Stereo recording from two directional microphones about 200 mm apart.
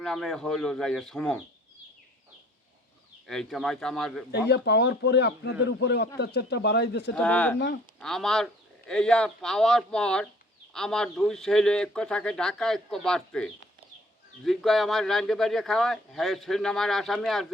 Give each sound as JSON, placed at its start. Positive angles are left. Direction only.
{"t": 0.0, "sound": "speech", "side_deg": 0}
{"t": 3.2, "sound": "speech", "side_deg": 0}
{"t": 4.4, "sound": "a man's voice", "side_deg": 55}
{"t": 7.2, "sound": "speech", "side_deg": 5}